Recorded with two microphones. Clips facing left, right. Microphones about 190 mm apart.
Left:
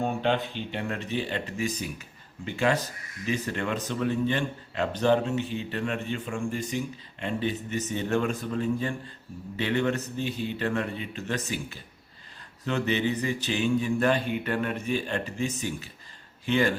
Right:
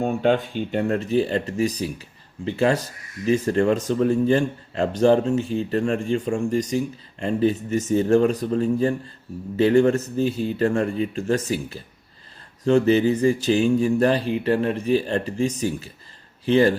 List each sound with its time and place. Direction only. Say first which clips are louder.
0.0 s speech: right 6 dB; 45° right (ahead or behind)